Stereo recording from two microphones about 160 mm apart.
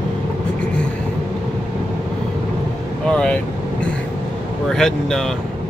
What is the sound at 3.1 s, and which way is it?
Speech, 5° left (ahead or behind).